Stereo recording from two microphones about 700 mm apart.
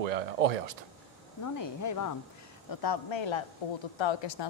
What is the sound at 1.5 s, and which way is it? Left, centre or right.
A woman's voice, left.